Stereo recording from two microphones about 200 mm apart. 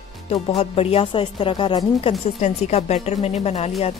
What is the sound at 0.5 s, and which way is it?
A woman's voice, 30° left (ahead or behind).